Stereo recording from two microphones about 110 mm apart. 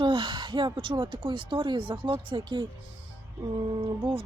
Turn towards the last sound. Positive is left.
turn(degrees=-50)  # may be behind; listen again after turning